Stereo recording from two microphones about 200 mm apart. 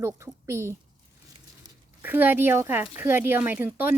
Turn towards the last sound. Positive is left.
turn(degrees=-10)  # may be behind; listen again after turning